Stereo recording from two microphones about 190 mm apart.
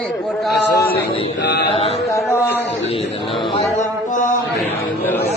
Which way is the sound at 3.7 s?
40° left (ahead or behind).